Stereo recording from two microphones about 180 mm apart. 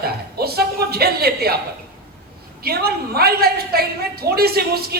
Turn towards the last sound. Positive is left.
turn(degrees=-60)  # may be behind; listen again after turning